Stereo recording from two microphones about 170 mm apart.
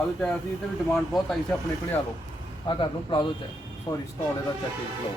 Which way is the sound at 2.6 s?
30° left (ahead or behind).